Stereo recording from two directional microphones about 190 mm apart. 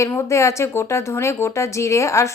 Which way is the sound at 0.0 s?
15° left (ahead or behind).